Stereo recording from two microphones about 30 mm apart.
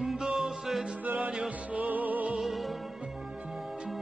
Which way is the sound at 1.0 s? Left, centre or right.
Right.